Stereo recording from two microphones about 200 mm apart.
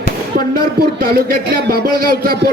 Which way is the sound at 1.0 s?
50° right (ahead or behind).